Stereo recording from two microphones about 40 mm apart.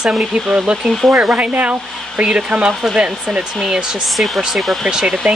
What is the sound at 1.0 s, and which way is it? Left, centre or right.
Speech, right.